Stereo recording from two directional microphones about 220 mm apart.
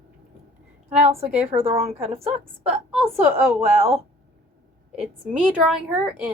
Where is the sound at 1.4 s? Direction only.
25° right (ahead or behind).